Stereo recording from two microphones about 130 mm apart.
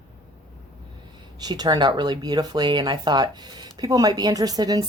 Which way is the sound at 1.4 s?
30° right (ahead or behind).